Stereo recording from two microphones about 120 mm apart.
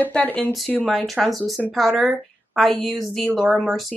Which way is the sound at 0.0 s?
15° left (ahead or behind).